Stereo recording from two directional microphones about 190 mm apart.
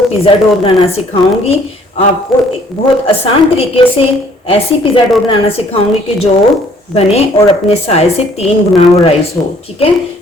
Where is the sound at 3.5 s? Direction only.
30° left (ahead or behind).